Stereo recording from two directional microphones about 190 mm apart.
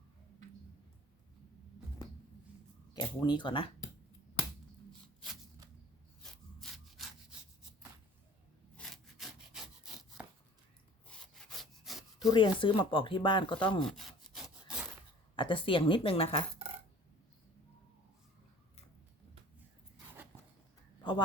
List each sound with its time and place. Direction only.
2.9 s speech: 20° left (ahead or behind)
6.6 s sawing: centre (ahead or behind)
8.7 s sawing: centre (ahead or behind)
12.3 s speech: 25° left (ahead or behind)
13.8 s sawing: centre (ahead or behind)
15.4 s speech: 25° left (ahead or behind)